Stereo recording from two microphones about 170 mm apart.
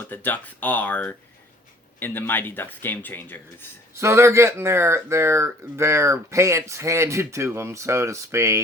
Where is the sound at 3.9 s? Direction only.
15° right (ahead or behind).